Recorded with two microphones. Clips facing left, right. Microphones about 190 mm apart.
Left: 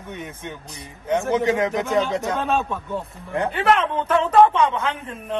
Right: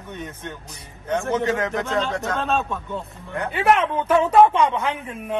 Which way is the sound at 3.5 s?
10° right (ahead or behind).